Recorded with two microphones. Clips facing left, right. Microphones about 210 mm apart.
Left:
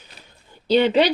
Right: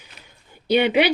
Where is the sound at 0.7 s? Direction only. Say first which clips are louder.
Left 1 dB; 10° right (ahead or behind).